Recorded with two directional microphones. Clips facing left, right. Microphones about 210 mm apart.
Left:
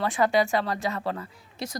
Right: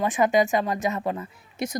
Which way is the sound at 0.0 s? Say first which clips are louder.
Right 2 dB; 20° right (ahead or behind).